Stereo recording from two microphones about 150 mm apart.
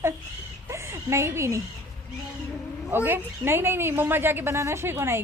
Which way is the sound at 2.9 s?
15° right (ahead or behind).